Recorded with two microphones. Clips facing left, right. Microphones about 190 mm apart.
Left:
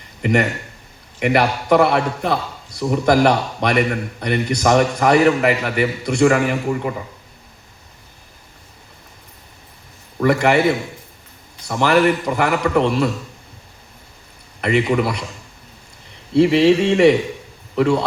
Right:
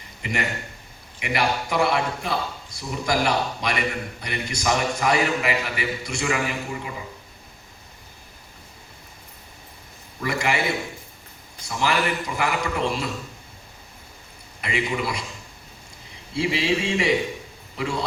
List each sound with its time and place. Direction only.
0.2 s a man's voice: 55° left (ahead or behind)
10.2 s a man's voice: 60° left (ahead or behind)
11.7 s a man's voice: 55° left (ahead or behind)
14.6 s a man's voice: 60° left (ahead or behind)
16.3 s a man's voice: 60° left (ahead or behind)